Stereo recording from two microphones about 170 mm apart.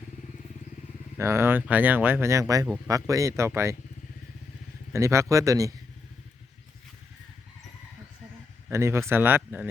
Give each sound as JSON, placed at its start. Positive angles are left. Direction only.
{"t": 1.2, "sound": "speech", "side_deg": -15}
{"t": 4.9, "sound": "speech", "side_deg": -15}
{"t": 8.7, "sound": "speech", "side_deg": -15}